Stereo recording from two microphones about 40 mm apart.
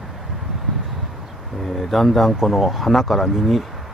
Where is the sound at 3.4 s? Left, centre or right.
Centre.